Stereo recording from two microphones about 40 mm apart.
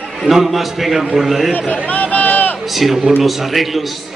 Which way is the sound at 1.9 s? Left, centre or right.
Left.